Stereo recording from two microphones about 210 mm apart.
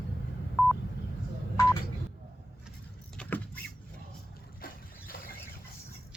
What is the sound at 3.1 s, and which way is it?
Vehicle, 5° left (ahead or behind).